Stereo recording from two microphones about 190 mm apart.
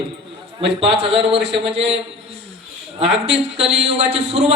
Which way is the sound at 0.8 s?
65° right (ahead or behind).